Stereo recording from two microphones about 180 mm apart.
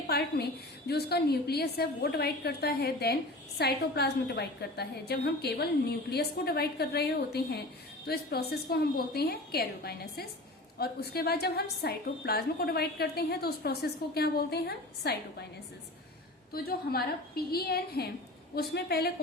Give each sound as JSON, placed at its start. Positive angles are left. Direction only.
{"t": 0.1, "sound": "a woman's voice", "side_deg": 60}
{"t": 16.5, "sound": "a woman's voice", "side_deg": 60}